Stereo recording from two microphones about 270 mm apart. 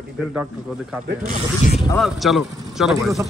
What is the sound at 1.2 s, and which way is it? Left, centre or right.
Speech, right.